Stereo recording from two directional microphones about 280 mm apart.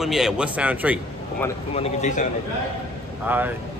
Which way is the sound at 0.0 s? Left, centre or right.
Centre.